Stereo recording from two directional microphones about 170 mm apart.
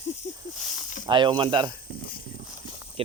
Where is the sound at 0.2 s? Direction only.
40° left (ahead or behind).